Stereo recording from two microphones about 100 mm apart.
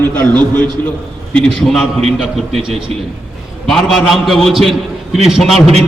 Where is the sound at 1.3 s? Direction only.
5° left (ahead or behind).